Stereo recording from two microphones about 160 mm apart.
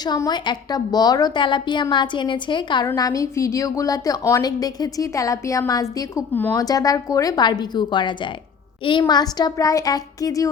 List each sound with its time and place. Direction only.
0.0 s a woman's voice: 25° left (ahead or behind)